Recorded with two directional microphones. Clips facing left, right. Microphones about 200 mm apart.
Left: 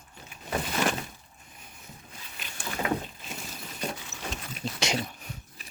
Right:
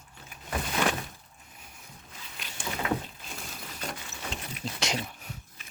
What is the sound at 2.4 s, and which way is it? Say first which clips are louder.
Boat: even; centre (ahead or behind).